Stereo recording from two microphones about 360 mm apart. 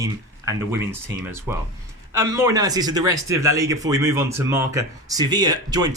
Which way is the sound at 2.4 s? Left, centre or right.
Centre.